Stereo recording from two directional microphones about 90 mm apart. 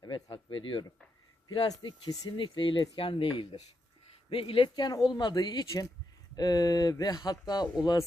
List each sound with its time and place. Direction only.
0.0 s a sound: 65° left (ahead or behind)
1.8 s speech: 50° left (ahead or behind)
2.4 s speech: 70° left (ahead or behind)
2.9 s speech: 80° left
4.7 s speech: 50° left (ahead or behind)